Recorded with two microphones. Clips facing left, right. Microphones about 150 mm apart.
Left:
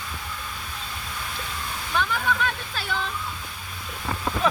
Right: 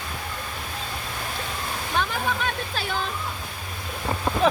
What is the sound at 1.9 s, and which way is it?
Speech, 40° right (ahead or behind).